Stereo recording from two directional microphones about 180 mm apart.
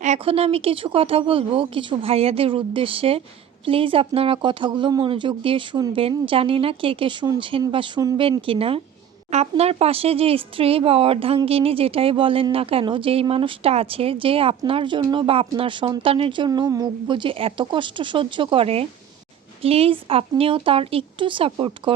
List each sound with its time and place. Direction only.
0.0 s speech: 35° right (ahead or behind)